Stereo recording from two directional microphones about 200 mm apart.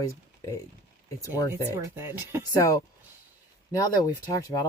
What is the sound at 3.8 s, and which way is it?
Speech, 20° left (ahead or behind).